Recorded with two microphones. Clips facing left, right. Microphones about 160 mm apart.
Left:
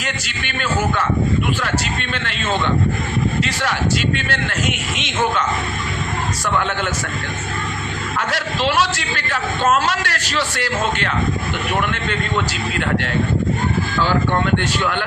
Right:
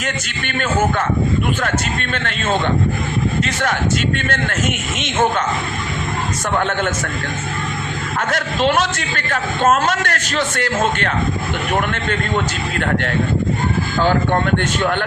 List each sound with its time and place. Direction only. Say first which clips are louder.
0.0 s a man's voice: right 2 dB; 45° right (ahead or behind)
2.1 s a man's voice: right 2 dB; 45° right (ahead or behind)
6.6 s a man's voice: right 5 dB; 45° right (ahead or behind)
8.3 s a man's voice: right 4 dB; 50° right (ahead or behind)
14.0 s a man's voice: right 2 dB; 50° right (ahead or behind)